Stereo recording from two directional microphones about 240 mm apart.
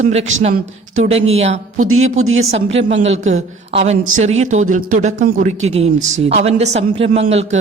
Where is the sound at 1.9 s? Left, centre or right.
Right.